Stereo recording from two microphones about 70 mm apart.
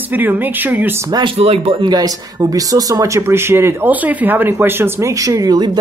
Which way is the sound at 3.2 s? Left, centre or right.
Right.